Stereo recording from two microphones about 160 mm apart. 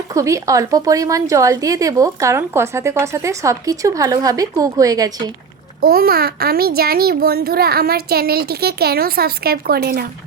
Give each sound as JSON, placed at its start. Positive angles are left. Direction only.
{"t": 0.1, "sound": "a woman's voice", "side_deg": -20}
{"t": 5.8, "sound": "a child's voice", "side_deg": -70}